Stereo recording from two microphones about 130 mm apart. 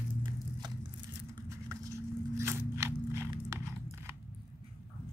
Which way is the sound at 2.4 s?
20° right (ahead or behind).